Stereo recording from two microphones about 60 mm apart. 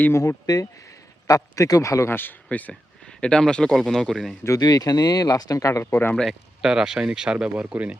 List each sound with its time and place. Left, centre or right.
0.1 s speech: left
0.4 s speech: left
1.3 s a man's voice: left
2.0 s speech: left
3.1 s speech: centre
4.4 s speech: left
5.8 s speech: left
6.6 s speech: centre